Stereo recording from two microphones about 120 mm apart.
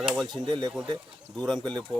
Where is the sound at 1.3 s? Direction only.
5° left (ahead or behind).